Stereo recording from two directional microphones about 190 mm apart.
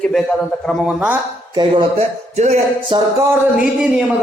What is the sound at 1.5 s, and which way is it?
Speech, 25° right (ahead or behind).